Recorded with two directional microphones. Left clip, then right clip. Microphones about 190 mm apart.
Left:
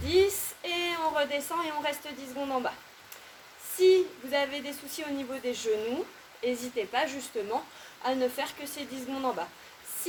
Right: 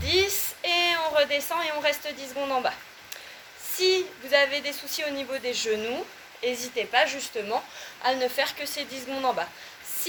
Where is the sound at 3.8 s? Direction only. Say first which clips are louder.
Left 1 dB; 15° left (ahead or behind).